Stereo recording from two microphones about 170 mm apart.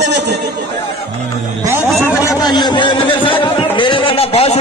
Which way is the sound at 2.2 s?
25° left (ahead or behind).